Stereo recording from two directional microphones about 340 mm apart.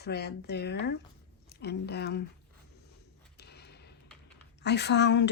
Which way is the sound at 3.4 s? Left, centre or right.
Left.